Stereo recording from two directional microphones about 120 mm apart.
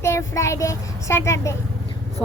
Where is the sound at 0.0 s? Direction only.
25° left (ahead or behind).